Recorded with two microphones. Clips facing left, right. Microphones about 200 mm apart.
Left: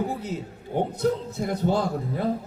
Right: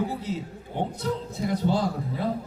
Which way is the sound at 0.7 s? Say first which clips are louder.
Left 5 dB; 45° left (ahead or behind).